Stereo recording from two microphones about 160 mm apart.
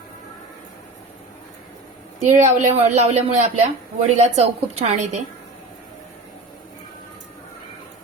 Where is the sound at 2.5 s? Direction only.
45° right (ahead or behind).